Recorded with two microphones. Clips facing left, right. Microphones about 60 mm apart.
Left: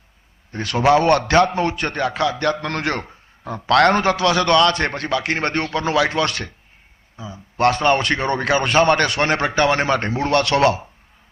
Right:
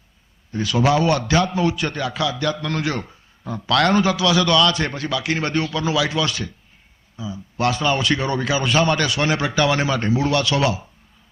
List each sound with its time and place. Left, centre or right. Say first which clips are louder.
0.5 s a man's voice: left 3 dB; left
7.2 s a man's voice: left 4 dB; left